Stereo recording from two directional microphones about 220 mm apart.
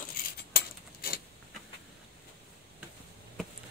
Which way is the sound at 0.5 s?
45° left (ahead or behind).